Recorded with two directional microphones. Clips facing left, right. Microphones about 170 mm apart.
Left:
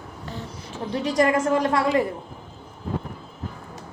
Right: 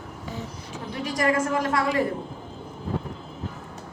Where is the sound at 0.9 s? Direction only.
25° left (ahead or behind).